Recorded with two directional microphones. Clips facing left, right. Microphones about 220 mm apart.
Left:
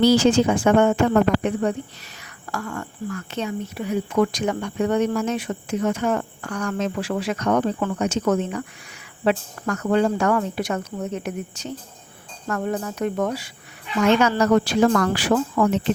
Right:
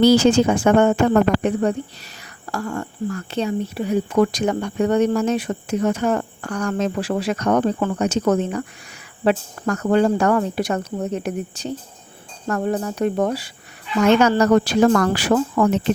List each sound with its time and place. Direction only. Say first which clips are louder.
0.0 s speech: right 2 dB; 45° right (ahead or behind)